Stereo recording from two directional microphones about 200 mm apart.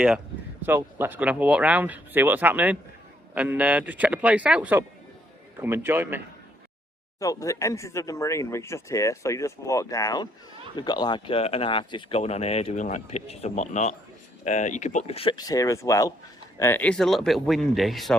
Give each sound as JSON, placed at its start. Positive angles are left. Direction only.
{"t": 0.6, "sound": "speech", "side_deg": -10}
{"t": 7.2, "sound": "speech", "side_deg": 15}